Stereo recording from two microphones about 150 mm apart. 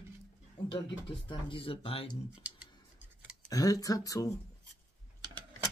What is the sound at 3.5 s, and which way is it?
Speech, 25° left (ahead or behind).